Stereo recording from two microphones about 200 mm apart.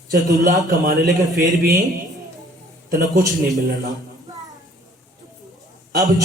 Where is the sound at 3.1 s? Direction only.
15° right (ahead or behind).